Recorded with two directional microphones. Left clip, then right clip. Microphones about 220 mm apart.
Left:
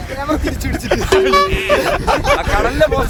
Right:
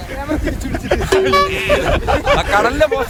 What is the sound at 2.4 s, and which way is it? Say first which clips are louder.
Speech: right 3 dB; 40° right (ahead or behind).